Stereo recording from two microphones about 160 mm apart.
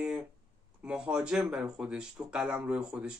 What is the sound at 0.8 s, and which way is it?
Speech, 5° right (ahead or behind).